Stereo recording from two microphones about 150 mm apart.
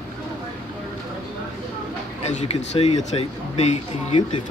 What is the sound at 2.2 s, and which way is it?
Speech, 50° left (ahead or behind).